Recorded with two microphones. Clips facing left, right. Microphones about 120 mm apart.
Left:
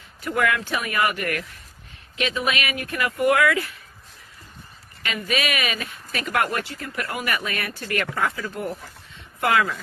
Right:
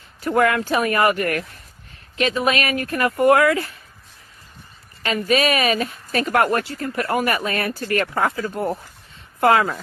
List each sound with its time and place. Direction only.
0.2 s speech: 40° right (ahead or behind)
5.0 s speech: 40° right (ahead or behind)